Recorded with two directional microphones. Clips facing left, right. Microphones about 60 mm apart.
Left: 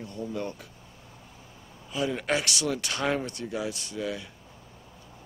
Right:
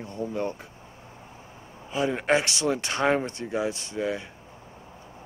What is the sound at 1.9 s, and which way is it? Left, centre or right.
Speech, right.